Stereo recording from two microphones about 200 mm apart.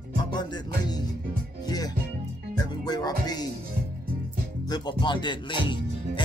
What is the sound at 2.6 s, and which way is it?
Music, 20° left (ahead or behind).